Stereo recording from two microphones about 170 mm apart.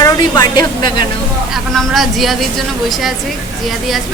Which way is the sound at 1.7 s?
Centre (ahead or behind).